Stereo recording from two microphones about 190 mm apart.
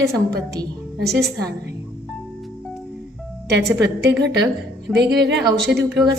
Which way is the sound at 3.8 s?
60° right (ahead or behind).